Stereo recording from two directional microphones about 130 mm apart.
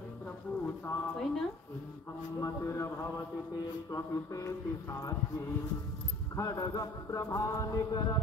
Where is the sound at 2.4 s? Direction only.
25° left (ahead or behind).